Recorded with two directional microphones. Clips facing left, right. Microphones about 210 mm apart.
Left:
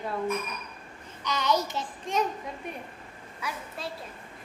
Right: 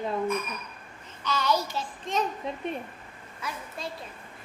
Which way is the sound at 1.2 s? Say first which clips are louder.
Even; 20° left (ahead or behind).